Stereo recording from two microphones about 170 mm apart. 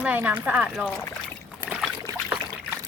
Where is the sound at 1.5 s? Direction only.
10° right (ahead or behind).